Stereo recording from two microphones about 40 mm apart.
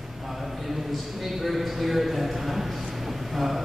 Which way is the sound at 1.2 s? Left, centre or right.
Centre.